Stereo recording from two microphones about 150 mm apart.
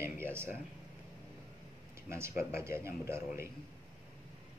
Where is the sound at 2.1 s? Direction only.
15° right (ahead or behind).